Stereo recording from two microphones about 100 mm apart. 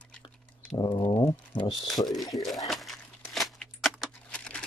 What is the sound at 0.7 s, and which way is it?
Speech, 45° left (ahead or behind).